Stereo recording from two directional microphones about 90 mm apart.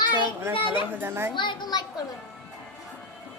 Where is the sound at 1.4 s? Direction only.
55° left (ahead or behind).